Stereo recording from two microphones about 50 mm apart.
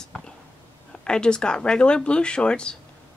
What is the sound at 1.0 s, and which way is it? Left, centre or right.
Speech, centre.